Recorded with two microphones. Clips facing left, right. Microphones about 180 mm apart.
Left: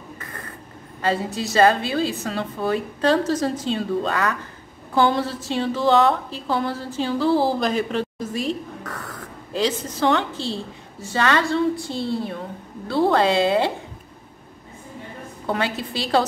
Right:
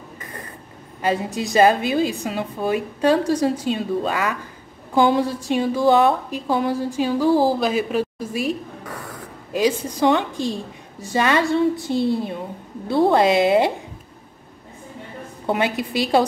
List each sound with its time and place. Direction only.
0.2 s mechanisms: 15° right (ahead or behind)
1.0 s a woman's voice: 15° right (ahead or behind)
15.4 s a woman's voice: 15° right (ahead or behind)